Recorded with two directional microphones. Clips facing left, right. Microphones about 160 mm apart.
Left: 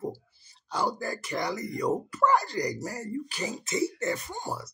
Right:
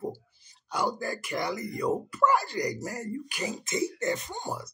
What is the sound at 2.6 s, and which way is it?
Speech, 35° left (ahead or behind).